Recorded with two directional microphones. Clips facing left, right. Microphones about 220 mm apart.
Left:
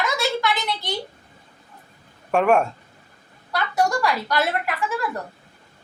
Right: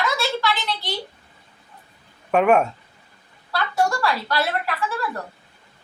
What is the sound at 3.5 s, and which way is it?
A woman's voice, 15° left (ahead or behind).